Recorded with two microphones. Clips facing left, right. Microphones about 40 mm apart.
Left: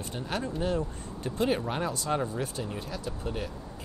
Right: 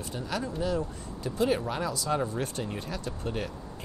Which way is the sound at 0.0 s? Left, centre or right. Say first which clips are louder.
Even; left.